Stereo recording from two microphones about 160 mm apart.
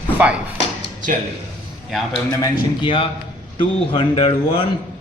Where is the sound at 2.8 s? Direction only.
35° left (ahead or behind).